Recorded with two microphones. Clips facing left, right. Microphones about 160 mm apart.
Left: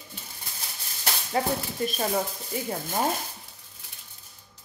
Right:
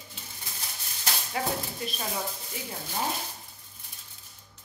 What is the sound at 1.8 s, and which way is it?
Speech, 50° left (ahead or behind).